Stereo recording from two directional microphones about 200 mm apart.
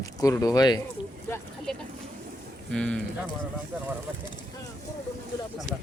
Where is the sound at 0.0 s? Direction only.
15° left (ahead or behind).